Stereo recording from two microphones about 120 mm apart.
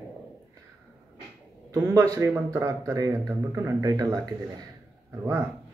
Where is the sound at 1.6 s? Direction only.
25° right (ahead or behind).